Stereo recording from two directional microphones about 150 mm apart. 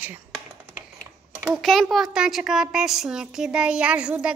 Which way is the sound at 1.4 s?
Centre (ahead or behind).